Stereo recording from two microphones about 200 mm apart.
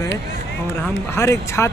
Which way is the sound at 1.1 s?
15° left (ahead or behind).